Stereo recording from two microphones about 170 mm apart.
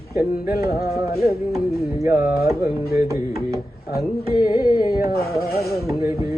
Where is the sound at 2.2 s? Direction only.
60° left (ahead or behind).